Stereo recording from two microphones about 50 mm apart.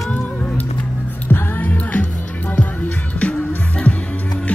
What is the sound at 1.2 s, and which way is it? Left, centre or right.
Music, left.